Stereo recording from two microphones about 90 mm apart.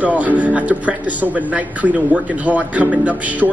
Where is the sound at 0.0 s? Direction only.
15° right (ahead or behind).